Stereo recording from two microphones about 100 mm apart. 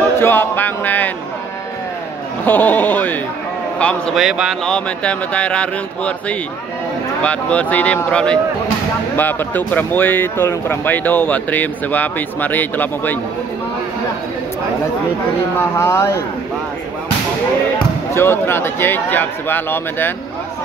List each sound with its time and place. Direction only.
0.2 s a man's voice: 20° left (ahead or behind)
2.4 s speech: 20° left (ahead or behind)
4.1 s speech: 5° right (ahead or behind)
4.6 s speech: 10° left (ahead or behind)
15.5 s a man's voice: 25° left (ahead or behind)
18.1 s a man's voice: 25° left (ahead or behind)